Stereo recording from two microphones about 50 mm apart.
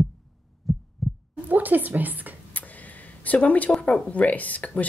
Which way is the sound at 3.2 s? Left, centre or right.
Left.